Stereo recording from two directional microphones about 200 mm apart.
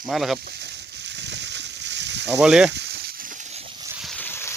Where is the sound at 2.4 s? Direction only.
Centre (ahead or behind).